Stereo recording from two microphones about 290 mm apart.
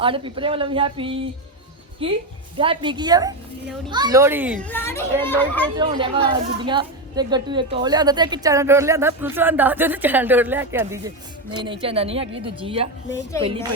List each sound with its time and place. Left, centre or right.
0.0 s a woman's voice: centre
4.6 s speech: centre
5.7 s a woman's voice: centre